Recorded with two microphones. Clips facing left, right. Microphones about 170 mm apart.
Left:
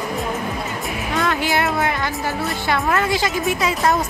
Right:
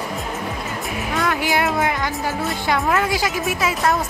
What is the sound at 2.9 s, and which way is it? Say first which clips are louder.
A woman's voice: left 1 dB; 10° right (ahead or behind).